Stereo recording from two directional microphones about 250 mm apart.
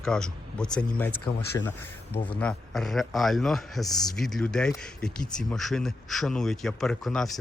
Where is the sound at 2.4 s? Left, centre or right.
Centre.